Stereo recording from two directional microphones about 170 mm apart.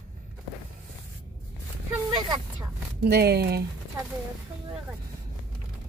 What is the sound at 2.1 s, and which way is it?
Speech, 25° right (ahead or behind).